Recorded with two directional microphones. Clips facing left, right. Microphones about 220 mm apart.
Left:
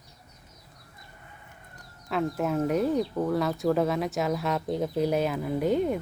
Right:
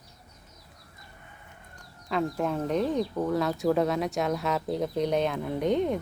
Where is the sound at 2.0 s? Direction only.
5° left (ahead or behind).